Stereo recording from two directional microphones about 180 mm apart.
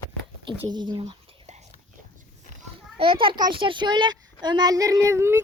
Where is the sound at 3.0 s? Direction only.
30° right (ahead or behind).